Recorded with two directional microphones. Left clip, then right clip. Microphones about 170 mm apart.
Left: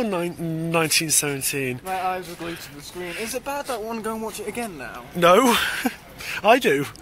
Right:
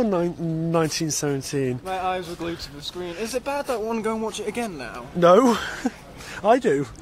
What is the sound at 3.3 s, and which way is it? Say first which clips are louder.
Speech: right 4 dB; 40° right (ahead or behind).